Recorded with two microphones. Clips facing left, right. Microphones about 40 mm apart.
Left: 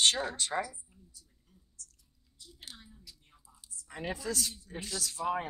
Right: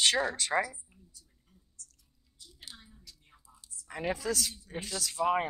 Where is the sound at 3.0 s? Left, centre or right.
Centre.